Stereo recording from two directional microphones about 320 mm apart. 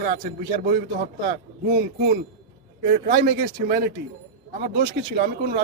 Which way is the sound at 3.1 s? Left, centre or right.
Right.